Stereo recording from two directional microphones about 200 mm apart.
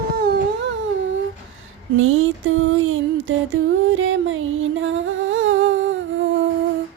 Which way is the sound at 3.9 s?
80° right.